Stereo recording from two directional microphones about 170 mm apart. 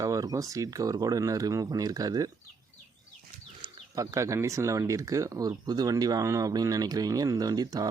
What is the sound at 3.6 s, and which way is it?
Speech, 20° right (ahead or behind).